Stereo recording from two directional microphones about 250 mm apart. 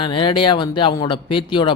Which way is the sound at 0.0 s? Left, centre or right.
Centre.